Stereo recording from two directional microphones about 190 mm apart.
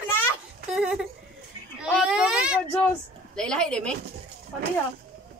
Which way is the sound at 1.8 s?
5° right (ahead or behind).